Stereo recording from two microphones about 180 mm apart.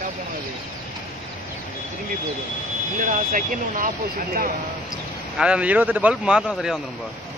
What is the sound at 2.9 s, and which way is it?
Speech, 45° right (ahead or behind).